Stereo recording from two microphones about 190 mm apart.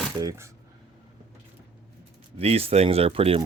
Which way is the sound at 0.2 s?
20° right (ahead or behind).